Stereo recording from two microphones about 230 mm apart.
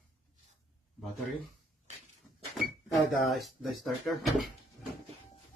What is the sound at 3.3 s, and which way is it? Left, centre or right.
Speech, centre.